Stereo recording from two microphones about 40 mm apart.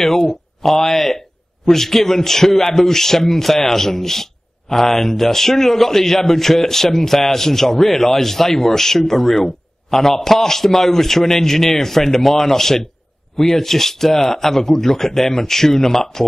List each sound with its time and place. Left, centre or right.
0.0 s speech: centre